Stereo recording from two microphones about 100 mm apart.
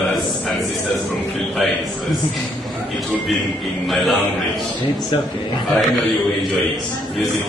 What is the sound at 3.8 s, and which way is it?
Speech, centre (ahead or behind).